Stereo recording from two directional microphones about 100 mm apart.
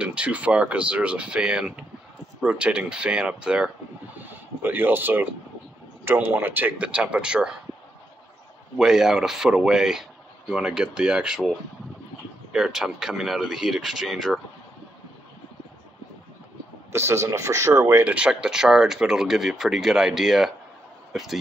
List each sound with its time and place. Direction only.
0.0 s speech: 10° right (ahead or behind)
8.7 s speech: 5° right (ahead or behind)
12.5 s speech: 5° right (ahead or behind)
16.9 s speech: 25° right (ahead or behind)
18.0 s a man's voice: 10° right (ahead or behind)